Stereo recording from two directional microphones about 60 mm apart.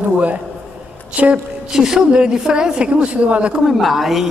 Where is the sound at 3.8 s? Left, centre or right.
Centre.